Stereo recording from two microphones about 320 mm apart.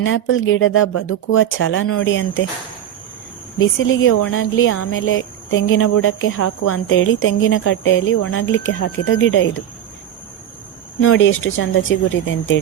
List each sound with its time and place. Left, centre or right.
0.0 s speech: left
3.6 s speech: left
11.0 s speech: left